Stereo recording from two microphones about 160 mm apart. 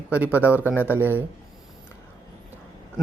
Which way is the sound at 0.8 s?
10° right (ahead or behind).